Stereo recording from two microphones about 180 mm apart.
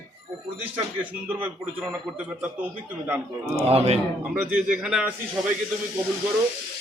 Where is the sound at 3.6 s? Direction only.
35° right (ahead or behind).